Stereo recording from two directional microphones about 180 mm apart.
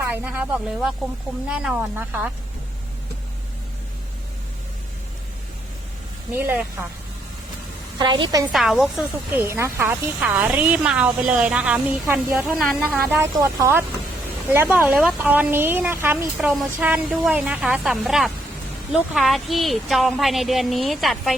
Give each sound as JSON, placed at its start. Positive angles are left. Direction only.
{"t": 0.0, "sound": "speech", "side_deg": -10}
{"t": 6.3, "sound": "speech", "side_deg": -10}
{"t": 7.9, "sound": "a woman's voice", "side_deg": -25}
{"t": 8.5, "sound": "a woman's voice", "side_deg": 0}